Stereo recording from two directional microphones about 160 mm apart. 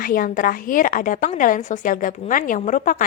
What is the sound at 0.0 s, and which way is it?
A woman's voice, 60° left (ahead or behind).